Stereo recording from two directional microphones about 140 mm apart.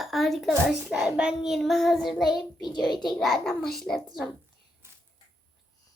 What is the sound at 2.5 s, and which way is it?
Speech, 30° left (ahead or behind).